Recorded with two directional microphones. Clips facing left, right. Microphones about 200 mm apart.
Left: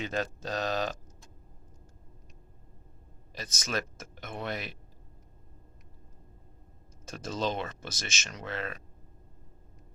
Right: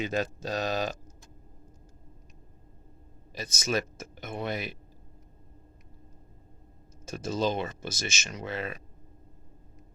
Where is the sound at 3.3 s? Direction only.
Centre (ahead or behind).